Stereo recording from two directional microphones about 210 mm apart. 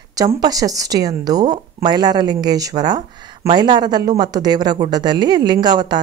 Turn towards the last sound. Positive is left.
turn(degrees=-20)  # may be behind; listen again after turning